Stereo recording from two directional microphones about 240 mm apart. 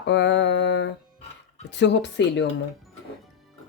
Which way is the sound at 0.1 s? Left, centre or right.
Left.